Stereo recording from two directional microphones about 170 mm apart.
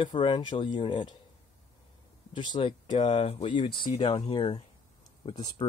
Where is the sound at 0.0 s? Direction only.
30° left (ahead or behind).